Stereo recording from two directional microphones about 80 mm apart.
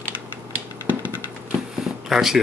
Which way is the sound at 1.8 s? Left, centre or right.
Centre.